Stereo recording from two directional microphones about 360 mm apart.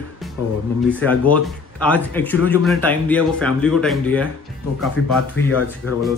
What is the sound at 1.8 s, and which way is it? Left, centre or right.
Speech, centre.